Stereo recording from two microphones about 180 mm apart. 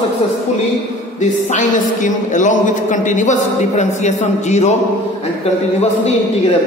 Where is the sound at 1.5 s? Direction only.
45° left (ahead or behind).